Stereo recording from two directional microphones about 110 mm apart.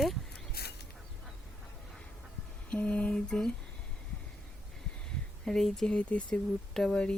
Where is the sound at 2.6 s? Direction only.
10° left (ahead or behind).